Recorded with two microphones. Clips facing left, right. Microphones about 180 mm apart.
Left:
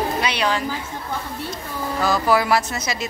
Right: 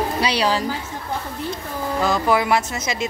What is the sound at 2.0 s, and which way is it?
Speech, 20° right (ahead or behind).